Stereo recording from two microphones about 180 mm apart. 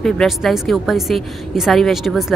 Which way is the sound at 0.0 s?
Centre (ahead or behind).